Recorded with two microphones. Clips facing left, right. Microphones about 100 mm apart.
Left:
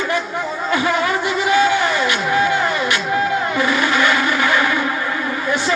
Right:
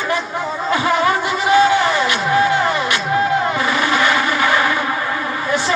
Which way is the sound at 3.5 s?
35° right (ahead or behind).